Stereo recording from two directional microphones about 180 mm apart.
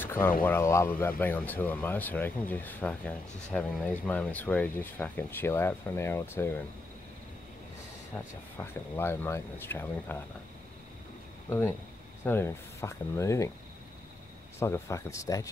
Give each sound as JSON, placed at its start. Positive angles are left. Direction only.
{"t": 0.0, "sound": "a sound", "side_deg": 10}
{"t": 0.4, "sound": "speech", "side_deg": 10}
{"t": 8.5, "sound": "speech", "side_deg": 10}
{"t": 11.4, "sound": "speech", "side_deg": 15}
{"t": 14.6, "sound": "speech", "side_deg": 15}